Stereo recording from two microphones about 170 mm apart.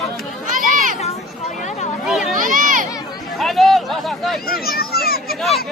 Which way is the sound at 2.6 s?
55° right (ahead or behind).